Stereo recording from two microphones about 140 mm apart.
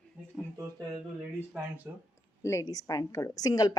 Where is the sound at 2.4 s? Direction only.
20° left (ahead or behind).